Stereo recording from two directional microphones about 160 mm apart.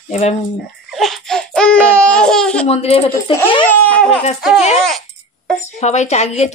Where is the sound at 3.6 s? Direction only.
10° left (ahead or behind).